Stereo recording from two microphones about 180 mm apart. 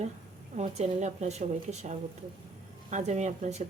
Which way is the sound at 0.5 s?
40° right (ahead or behind).